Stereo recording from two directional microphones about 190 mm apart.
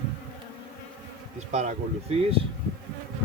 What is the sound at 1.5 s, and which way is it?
Speech, 35° right (ahead or behind).